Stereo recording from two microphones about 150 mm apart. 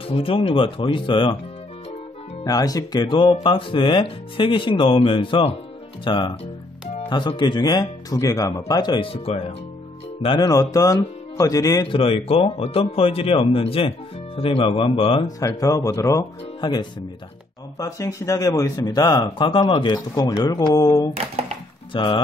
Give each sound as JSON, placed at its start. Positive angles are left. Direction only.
{"t": 0.1, "sound": "speech", "side_deg": 35}
{"t": 2.4, "sound": "speech", "side_deg": 25}
{"t": 10.2, "sound": "speech", "side_deg": 30}
{"t": 11.9, "sound": "speech", "side_deg": 40}
{"t": 15.2, "sound": "speech", "side_deg": 25}
{"t": 21.9, "sound": "speech", "side_deg": 35}